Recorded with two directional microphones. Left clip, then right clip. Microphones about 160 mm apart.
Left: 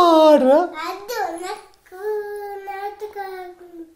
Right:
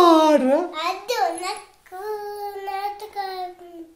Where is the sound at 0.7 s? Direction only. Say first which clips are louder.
Right 2 dB; 20° right (ahead or behind).